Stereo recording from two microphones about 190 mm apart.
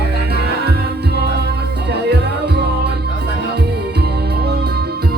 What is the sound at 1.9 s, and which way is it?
Music, 60° right (ahead or behind).